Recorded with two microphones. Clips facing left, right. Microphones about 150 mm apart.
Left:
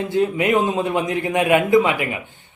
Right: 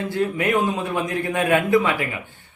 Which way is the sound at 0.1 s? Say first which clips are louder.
Left 4 dB; 20° left (ahead or behind).